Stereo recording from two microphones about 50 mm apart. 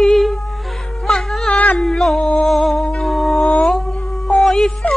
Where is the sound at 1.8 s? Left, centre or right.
Centre.